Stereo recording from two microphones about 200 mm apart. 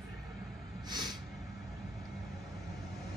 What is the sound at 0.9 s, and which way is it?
Snort, 20° right (ahead or behind).